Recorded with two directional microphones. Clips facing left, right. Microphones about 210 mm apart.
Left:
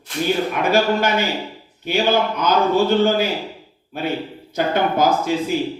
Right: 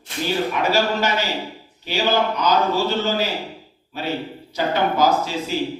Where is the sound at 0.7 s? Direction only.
55° left (ahead or behind).